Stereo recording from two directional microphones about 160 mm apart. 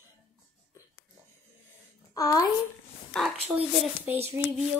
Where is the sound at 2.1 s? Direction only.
20° left (ahead or behind).